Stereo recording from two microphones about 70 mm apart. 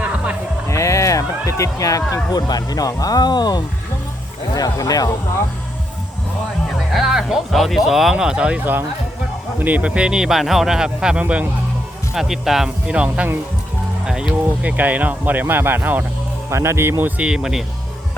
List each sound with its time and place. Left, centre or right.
0.7 s a sound: left
2.3 s speech: left
4.5 s speech: left
6.9 s speech: centre
12.1 s speech: centre
12.9 s speech: centre
16.5 s speech: right
17.2 s speech: centre